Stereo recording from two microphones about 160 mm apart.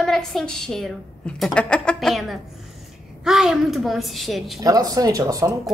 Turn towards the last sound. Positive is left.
turn(degrees=-20)  # may be behind; listen again after turning